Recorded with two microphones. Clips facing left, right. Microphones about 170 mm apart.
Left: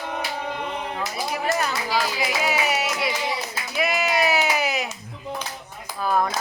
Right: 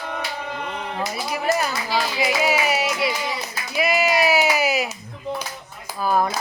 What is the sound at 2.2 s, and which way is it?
Music, centre (ahead or behind).